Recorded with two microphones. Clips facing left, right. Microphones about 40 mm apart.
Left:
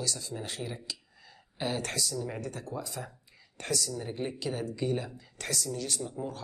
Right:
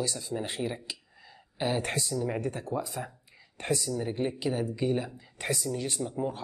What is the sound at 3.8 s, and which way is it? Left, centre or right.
A woman's voice, centre.